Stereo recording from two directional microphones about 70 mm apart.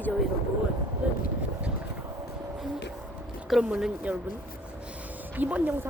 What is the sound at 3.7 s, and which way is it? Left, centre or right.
Speech, centre.